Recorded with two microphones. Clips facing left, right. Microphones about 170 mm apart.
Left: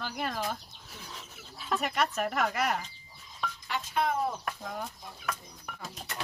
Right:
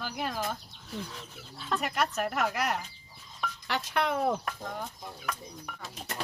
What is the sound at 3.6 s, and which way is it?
Speech, 75° right (ahead or behind).